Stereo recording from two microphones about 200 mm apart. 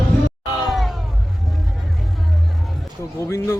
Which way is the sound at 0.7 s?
Centre (ahead or behind).